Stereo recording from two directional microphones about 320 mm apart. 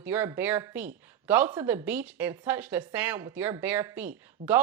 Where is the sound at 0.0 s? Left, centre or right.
Centre.